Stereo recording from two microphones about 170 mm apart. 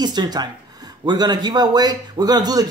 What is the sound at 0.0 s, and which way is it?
A man's voice, 25° right (ahead or behind).